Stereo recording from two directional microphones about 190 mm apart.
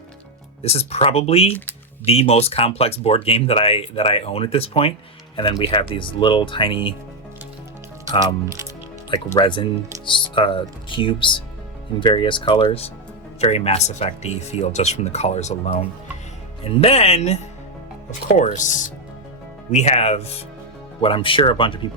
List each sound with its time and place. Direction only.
0.6 s speech: 35° left (ahead or behind)
9.0 s speech: 25° left (ahead or behind)
16.8 s speech: 30° left (ahead or behind)